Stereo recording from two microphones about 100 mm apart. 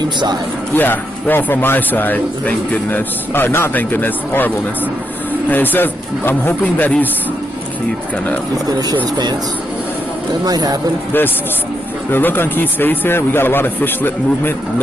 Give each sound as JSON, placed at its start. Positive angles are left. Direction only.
{"t": 0.0, "sound": "speech", "side_deg": -50}
{"t": 0.7, "sound": "a man's voice", "side_deg": 20}
{"t": 5.5, "sound": "a man's voice", "side_deg": 20}
{"t": 10.4, "sound": "speech", "side_deg": -40}
{"t": 12.1, "sound": "a man's voice", "side_deg": 20}